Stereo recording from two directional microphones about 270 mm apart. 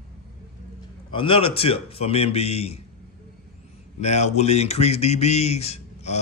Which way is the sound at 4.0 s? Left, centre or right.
Left.